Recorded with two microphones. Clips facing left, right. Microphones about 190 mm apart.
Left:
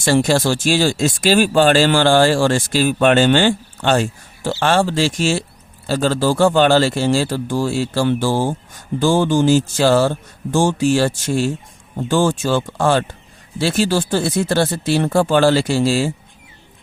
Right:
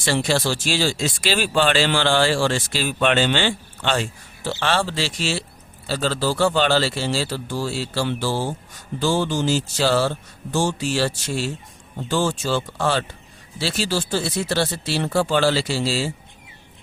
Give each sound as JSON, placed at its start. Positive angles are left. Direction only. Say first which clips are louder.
{"t": 0.0, "sound": "a man's voice", "louder": "left 6 dB", "side_deg": 45}